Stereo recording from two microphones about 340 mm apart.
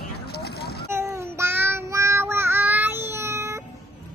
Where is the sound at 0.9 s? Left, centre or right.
Centre.